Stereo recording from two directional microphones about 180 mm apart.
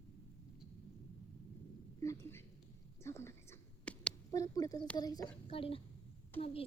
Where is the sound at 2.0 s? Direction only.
15° left (ahead or behind).